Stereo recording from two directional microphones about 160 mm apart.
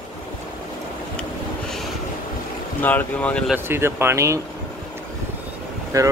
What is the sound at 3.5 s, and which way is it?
Speech, 15° right (ahead or behind).